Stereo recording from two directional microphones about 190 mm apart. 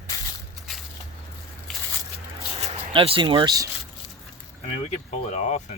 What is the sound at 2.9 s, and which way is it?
Speech, 25° right (ahead or behind).